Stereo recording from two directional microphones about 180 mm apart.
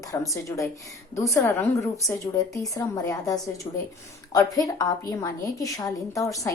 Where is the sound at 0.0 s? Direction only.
20° left (ahead or behind).